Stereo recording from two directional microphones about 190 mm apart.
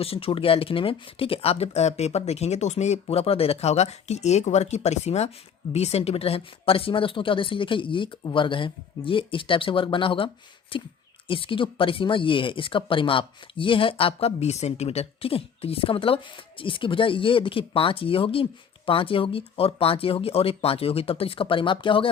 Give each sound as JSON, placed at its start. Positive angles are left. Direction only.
{"t": 0.0, "sound": "speech", "side_deg": 30}